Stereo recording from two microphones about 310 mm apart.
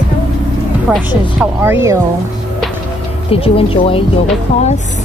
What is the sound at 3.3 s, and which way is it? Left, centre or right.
Speech, centre.